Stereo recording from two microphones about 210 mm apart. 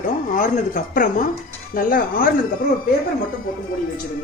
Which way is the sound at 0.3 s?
40° left (ahead or behind).